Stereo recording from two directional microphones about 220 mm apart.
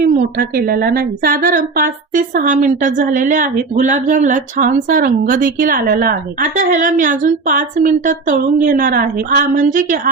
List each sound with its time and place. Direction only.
0.0 s speech: 45° right (ahead or behind)